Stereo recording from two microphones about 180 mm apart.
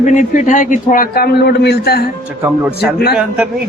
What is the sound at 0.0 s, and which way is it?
A man's voice, 45° left (ahead or behind).